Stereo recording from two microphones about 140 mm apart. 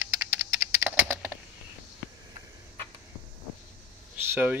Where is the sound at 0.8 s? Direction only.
10° right (ahead or behind).